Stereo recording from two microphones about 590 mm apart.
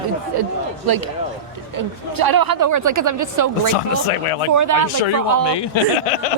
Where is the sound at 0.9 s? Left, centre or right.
Right.